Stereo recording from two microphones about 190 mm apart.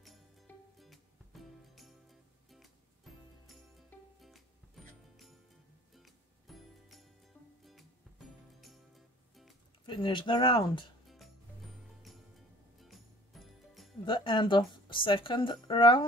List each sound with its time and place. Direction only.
0.7 s music: centre (ahead or behind)
4.8 s music: centre (ahead or behind)
5.9 s music: centre (ahead or behind)
9.8 s speech: 25° left (ahead or behind)
12.8 s music: centre (ahead or behind)
14.0 s speech: 25° left (ahead or behind)